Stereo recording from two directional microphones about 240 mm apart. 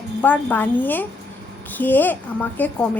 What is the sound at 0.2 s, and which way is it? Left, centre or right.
A woman's voice, centre.